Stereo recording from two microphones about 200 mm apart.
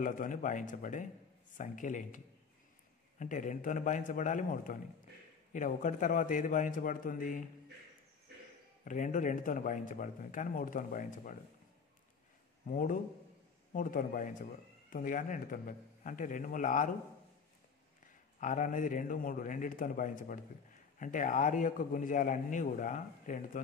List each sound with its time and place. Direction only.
0.0 s speech: 40° left (ahead or behind)
8.8 s speech: 40° left (ahead or behind)
12.6 s speech: 45° left (ahead or behind)
18.0 s speech: 40° left (ahead or behind)